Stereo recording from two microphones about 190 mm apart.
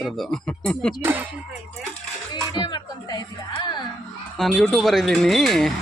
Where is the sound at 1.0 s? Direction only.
10° right (ahead or behind).